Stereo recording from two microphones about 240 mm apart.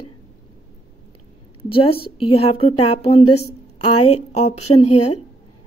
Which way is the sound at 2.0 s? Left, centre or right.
Left.